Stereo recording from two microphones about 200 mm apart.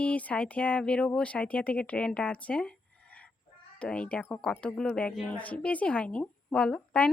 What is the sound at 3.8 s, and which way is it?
Speech, 5° left (ahead or behind).